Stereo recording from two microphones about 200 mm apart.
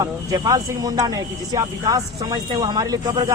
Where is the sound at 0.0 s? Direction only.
20° right (ahead or behind).